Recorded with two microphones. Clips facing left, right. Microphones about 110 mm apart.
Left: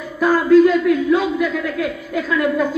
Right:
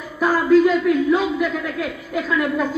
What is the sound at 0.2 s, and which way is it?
A man's voice, 10° right (ahead or behind).